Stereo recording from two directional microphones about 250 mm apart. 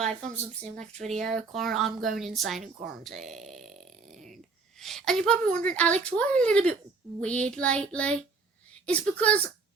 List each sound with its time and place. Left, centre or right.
1.0 s speech: centre
4.1 s a sound: right
4.8 s speech: centre